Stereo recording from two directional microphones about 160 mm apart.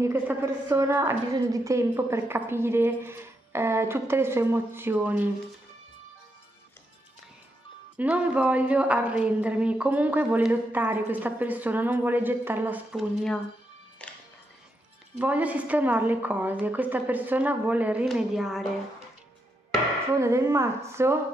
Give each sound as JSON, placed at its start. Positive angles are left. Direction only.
{"t": 0.0, "sound": "a woman's voice", "side_deg": -15}
{"t": 7.9, "sound": "a woman's voice", "side_deg": -10}
{"t": 15.1, "sound": "a woman's voice", "side_deg": -10}
{"t": 20.2, "sound": "a woman's voice", "side_deg": -15}